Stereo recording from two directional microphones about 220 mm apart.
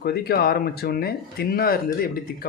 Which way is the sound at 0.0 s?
45° left (ahead or behind).